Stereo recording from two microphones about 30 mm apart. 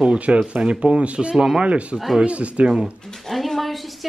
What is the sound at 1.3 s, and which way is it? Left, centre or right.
Speech, centre.